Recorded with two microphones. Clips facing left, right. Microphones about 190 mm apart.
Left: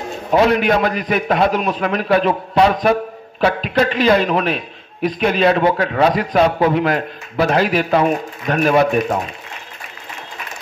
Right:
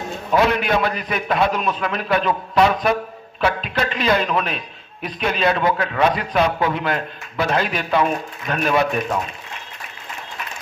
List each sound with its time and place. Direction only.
0.3 s a man's voice: 35° left (ahead or behind)